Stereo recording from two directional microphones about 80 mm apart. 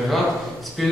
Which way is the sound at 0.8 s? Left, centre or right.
Centre.